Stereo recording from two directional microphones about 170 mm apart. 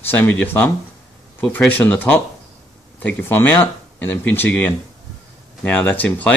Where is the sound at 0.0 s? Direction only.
10° left (ahead or behind).